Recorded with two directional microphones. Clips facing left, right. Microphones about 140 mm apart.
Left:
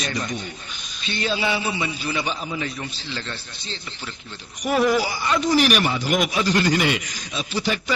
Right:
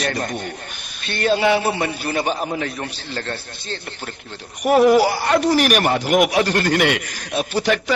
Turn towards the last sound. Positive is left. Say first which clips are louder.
# right 6 dB
turn(degrees=-65)  # may be behind; listen again after turning